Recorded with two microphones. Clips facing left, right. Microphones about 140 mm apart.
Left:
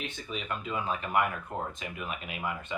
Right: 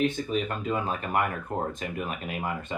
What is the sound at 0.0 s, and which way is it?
Speech, 45° right (ahead or behind).